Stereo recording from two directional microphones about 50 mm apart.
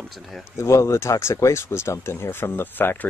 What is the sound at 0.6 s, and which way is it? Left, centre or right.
Speech, left.